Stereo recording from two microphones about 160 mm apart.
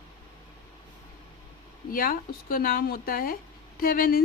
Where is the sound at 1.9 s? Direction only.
65° left (ahead or behind).